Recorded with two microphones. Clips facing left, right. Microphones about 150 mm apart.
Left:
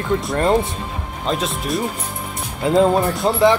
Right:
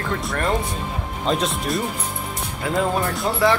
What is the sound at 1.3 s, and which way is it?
Speech, centre (ahead or behind).